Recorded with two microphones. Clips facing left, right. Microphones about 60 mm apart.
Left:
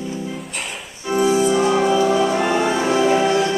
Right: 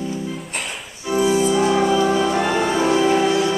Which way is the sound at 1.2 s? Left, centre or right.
Left.